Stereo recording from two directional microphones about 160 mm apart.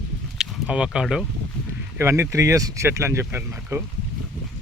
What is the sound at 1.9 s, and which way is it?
Speech, 15° right (ahead or behind).